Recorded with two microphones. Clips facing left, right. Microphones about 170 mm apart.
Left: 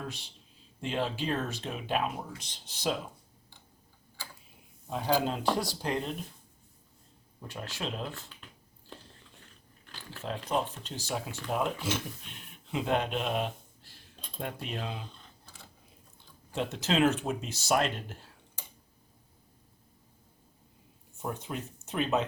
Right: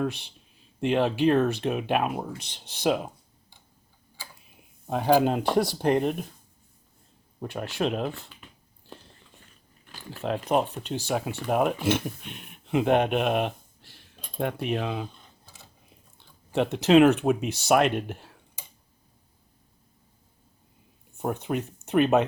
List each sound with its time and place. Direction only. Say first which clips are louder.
0.0 s speech: right 12 dB; 65° right (ahead or behind)
4.9 s speech: right 8 dB; 60° right (ahead or behind)
7.3 s speech: right 10 dB; 60° right (ahead or behind)
10.2 s speech: right 7 dB; 65° right (ahead or behind)
16.1 s speech: right 8 dB; 65° right (ahead or behind)
21.2 s speech: right 8 dB; 65° right (ahead or behind)